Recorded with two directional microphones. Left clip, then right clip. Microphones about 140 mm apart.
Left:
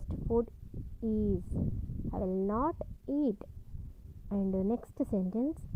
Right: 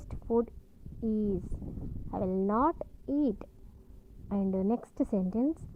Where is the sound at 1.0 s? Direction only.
15° left (ahead or behind).